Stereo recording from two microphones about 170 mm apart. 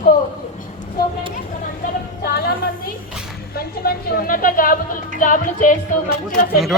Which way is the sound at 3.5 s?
65° left (ahead or behind).